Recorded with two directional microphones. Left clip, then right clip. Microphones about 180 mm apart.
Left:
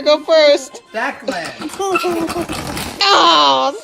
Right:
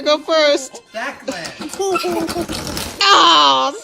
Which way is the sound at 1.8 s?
15° left (ahead or behind).